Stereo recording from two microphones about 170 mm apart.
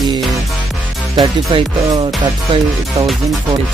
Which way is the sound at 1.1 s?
30° right (ahead or behind).